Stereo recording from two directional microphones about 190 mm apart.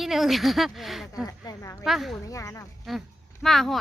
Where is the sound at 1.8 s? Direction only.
Centre (ahead or behind).